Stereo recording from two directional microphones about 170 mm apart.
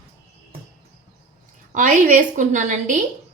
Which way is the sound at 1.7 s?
50° right (ahead or behind).